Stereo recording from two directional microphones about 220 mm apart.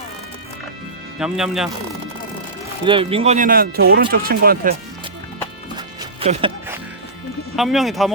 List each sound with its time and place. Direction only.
1.2 s speech: centre (ahead or behind)
2.8 s speech: 25° right (ahead or behind); by 4.8 s 40° right (ahead or behind)
5.7 s music: 20° right (ahead or behind)
7.5 s speech: centre (ahead or behind)